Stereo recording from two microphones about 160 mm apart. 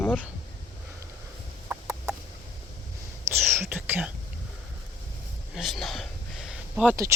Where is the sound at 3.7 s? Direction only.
10° right (ahead or behind).